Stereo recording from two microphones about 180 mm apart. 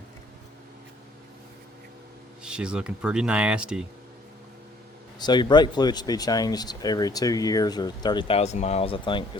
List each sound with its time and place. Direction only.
2.4 s speech: 5° right (ahead or behind)
5.2 s speech: 25° left (ahead or behind)